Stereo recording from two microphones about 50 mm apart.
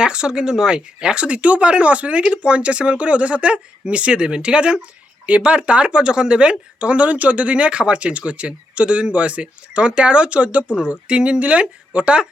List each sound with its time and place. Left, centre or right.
0.0 s speech: centre